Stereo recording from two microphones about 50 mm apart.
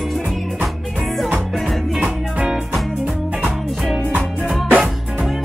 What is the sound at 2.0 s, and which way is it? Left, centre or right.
Music, centre.